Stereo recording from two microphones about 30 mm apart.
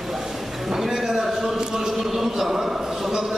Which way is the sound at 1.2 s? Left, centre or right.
Centre.